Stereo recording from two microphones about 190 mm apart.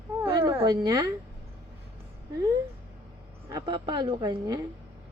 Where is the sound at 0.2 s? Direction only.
15° right (ahead or behind).